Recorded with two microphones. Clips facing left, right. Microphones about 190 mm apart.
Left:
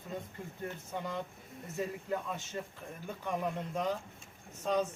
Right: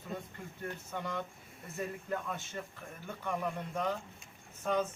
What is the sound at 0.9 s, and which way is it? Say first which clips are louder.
A man's voice: even; 15° left (ahead or behind).